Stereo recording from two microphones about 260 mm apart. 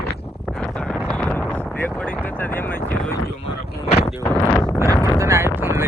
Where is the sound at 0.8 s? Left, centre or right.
Centre.